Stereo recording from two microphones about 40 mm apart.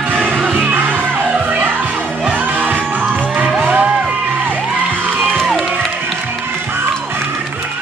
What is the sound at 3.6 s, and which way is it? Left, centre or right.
Music, right.